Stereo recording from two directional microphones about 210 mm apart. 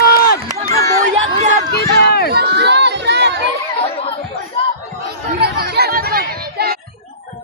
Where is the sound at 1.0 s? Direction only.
35° right (ahead or behind).